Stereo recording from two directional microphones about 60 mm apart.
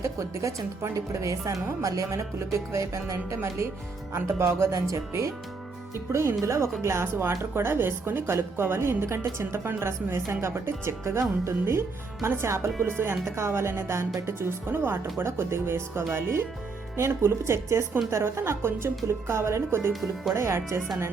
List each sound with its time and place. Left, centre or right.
0.0 s speech: right
19.9 s speech: centre
20.3 s speech: right